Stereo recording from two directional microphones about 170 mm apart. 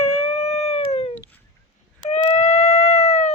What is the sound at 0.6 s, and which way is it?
Dog, 40° left (ahead or behind).